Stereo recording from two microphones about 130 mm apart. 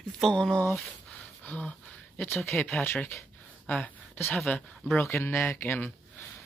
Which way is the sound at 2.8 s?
15° left (ahead or behind).